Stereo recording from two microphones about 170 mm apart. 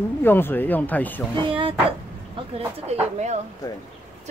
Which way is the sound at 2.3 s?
35° right (ahead or behind).